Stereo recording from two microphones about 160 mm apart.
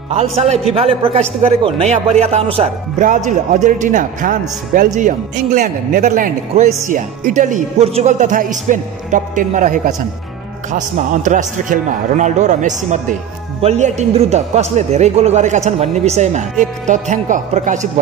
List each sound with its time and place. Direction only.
0.1 s speech: 40° right (ahead or behind)
3.3 s a man's voice: 50° right (ahead or behind)